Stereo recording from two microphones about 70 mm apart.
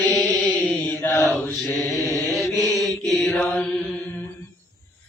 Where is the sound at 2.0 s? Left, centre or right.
Left.